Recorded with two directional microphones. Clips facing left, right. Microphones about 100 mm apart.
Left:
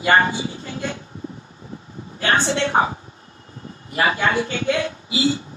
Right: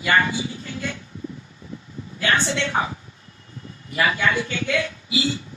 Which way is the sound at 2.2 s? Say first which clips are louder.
Left 3 dB; 35° left (ahead or behind).